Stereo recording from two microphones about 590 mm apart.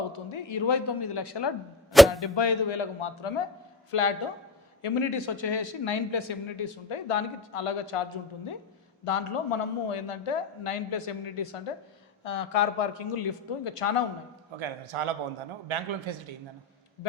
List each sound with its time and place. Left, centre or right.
0.1 s speech: left
1.9 s arrow: centre
2.2 s speech: left
9.0 s speech: left
12.2 s speech: left
14.6 s a man's voice: right